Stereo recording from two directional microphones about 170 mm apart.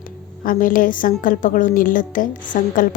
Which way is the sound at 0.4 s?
55° left (ahead or behind).